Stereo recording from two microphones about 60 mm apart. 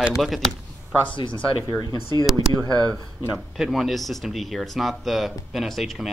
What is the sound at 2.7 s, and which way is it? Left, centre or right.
Speech, right.